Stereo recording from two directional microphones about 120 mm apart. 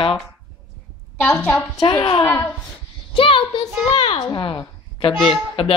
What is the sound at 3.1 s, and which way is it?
A child's voice, 50° left (ahead or behind).